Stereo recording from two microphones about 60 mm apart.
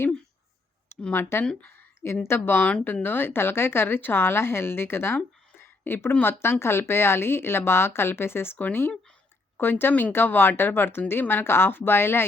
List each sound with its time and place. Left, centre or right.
1.1 s speech: left
2.6 s speech: left
6.4 s speech: left